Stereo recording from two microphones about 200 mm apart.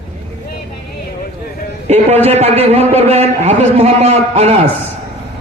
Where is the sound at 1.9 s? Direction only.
30° right (ahead or behind).